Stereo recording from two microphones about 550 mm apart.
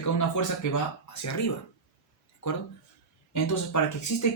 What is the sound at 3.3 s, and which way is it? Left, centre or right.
Speech, left.